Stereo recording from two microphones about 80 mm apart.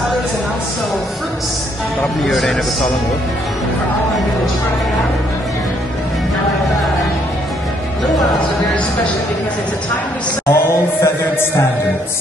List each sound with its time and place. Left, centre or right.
2.2 s a man's voice: centre
10.5 s chant: left